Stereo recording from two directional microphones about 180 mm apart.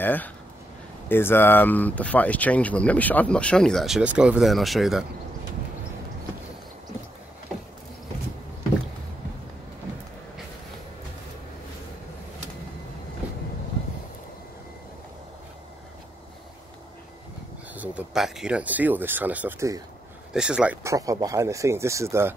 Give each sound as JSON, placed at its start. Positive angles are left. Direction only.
{"t": 0.0, "sound": "speech", "side_deg": 10}
{"t": 13.2, "sound": "vehicle", "side_deg": -10}
{"t": 17.7, "sound": "speech", "side_deg": -5}
{"t": 20.8, "sound": "speech", "side_deg": -20}